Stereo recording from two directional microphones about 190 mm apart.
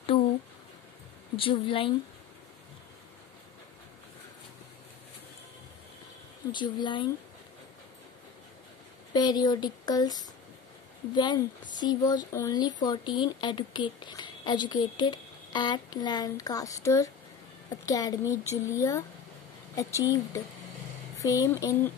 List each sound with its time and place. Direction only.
1.3 s a woman's voice: 30° left (ahead or behind)
6.5 s a woman's voice: 25° left (ahead or behind)
9.1 s a woman's voice: 20° left (ahead or behind)